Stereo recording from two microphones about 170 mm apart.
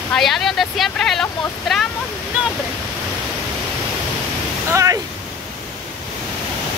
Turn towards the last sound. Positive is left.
turn(degrees=-15)  # may be behind; listen again after turning